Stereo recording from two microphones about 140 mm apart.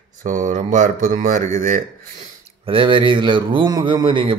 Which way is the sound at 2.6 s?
40° right (ahead or behind).